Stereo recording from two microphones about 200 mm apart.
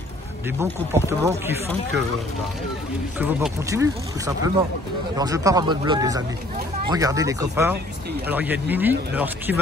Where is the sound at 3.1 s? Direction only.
10° right (ahead or behind).